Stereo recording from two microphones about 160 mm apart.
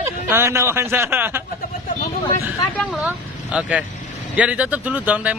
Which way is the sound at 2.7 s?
5° right (ahead or behind).